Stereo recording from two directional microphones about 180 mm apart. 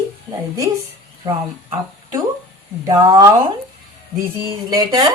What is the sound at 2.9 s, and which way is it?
Speech, 20° right (ahead or behind).